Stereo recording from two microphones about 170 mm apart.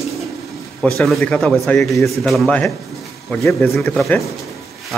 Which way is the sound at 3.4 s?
15° left (ahead or behind).